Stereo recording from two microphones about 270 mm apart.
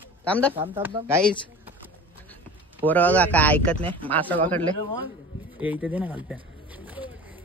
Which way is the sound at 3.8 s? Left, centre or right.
Centre.